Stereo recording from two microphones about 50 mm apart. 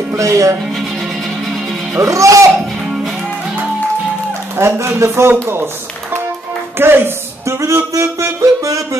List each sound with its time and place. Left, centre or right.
0.2 s speech: right
2.0 s speech: right
4.6 s speech: right
6.8 s speech: right
7.4 s speech: right
7.7 s music: right